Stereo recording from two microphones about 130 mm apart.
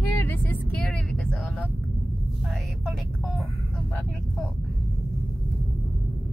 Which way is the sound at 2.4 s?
Centre (ahead or behind).